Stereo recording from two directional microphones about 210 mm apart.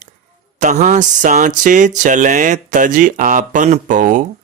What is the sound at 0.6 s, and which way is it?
Speech, 35° right (ahead or behind).